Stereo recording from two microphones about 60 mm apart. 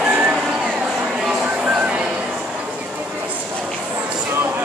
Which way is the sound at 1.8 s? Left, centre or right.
Right.